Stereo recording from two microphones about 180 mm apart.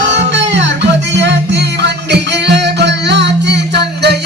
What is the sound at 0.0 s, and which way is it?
Music, 80° right.